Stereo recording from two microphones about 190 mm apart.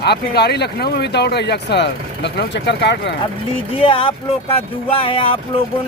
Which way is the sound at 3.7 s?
30° left (ahead or behind).